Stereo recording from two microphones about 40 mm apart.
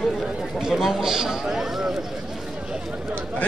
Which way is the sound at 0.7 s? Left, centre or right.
Centre.